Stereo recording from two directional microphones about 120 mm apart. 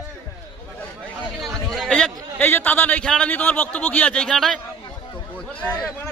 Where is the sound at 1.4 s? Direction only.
Centre (ahead or behind).